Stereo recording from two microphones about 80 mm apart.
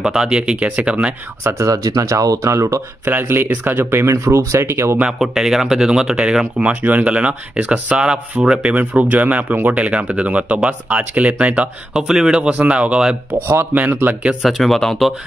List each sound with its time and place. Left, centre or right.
0.0 s speech: centre
1.4 s speech: right
1.7 s speech: right
3.1 s speech: right
4.1 s speech: right
5.2 s speech: centre; by 14.3 s right
14.4 s speech: centre